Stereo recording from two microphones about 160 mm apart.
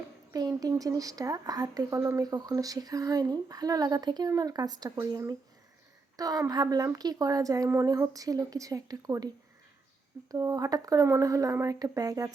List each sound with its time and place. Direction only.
0.3 s speech: 25° right (ahead or behind)
10.3 s speech: 20° right (ahead or behind)